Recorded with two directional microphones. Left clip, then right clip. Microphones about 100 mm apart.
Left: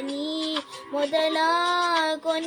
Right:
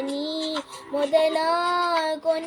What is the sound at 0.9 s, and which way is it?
Music, 35° left (ahead or behind).